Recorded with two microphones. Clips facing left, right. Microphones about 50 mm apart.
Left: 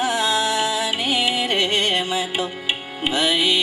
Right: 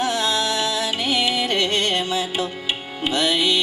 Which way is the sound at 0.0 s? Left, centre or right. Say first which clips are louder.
Left 1 dB; centre.